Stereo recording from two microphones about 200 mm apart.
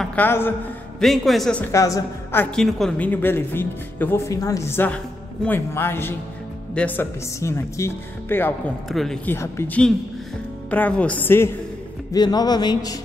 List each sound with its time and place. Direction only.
0.0 s a man's voice: 10° left (ahead or behind)
1.0 s a woman's voice: centre (ahead or behind); by 13.0 s 20° left (ahead or behind)